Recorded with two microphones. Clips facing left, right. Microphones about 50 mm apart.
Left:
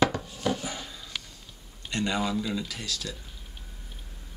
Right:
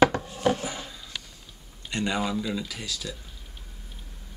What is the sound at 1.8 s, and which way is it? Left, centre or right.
Speech, centre.